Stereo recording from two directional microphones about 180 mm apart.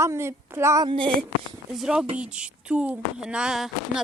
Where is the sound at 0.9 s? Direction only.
30° right (ahead or behind).